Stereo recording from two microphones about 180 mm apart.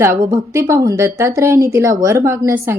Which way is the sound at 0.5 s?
20° right (ahead or behind).